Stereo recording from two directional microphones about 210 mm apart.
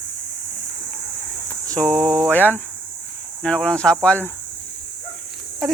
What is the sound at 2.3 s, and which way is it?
Speech, 10° left (ahead or behind).